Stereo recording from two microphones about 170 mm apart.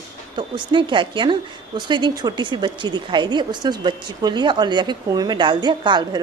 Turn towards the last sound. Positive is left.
turn(degrees=-25)  # may be behind; listen again after turning